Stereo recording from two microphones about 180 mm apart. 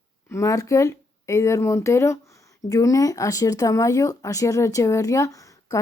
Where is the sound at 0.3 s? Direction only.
20° left (ahead or behind).